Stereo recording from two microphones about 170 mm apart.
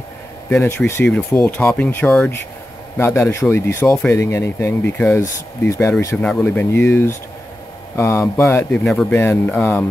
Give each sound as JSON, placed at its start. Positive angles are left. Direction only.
{"t": 0.5, "sound": "speech", "side_deg": 10}
{"t": 8.8, "sound": "speech", "side_deg": 5}